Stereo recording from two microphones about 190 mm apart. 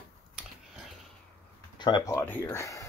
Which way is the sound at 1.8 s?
25° left (ahead or behind).